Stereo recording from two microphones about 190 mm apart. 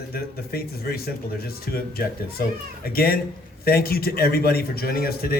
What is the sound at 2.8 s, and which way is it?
A man's voice, 50° left (ahead or behind).